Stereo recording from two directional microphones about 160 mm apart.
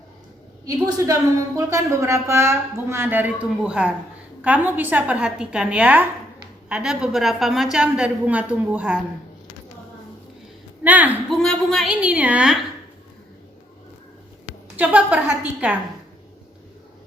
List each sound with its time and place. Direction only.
0.6 s a woman's voice: 20° right (ahead or behind)
10.8 s a woman's voice: 10° right (ahead or behind)
11.3 s a woman's voice: centre (ahead or behind)
12.0 s a woman's voice: 10° right (ahead or behind)
14.8 s a woman's voice: 10° right (ahead or behind)